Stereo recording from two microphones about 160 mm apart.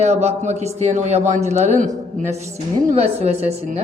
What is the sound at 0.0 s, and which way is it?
A woman's voice, 45° right (ahead or behind).